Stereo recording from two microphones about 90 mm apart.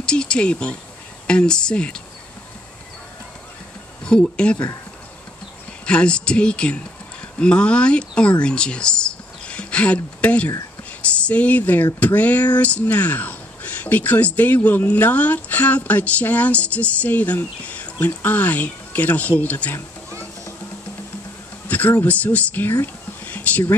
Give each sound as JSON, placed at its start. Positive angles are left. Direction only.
{"t": 0.0, "sound": "speech", "side_deg": 10}
{"t": 4.0, "sound": "speech", "side_deg": 10}
{"t": 5.9, "sound": "speech", "side_deg": 10}
{"t": 21.6, "sound": "a sound", "side_deg": 20}
{"t": 22.0, "sound": "speech", "side_deg": 15}
{"t": 23.2, "sound": "a sound", "side_deg": 20}